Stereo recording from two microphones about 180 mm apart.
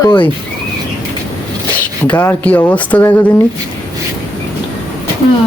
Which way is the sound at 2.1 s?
10° left (ahead or behind).